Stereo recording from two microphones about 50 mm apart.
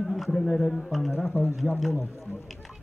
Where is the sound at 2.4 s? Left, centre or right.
Centre.